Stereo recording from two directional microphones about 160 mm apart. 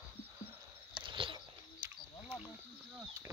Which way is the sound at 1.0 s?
30° right (ahead or behind).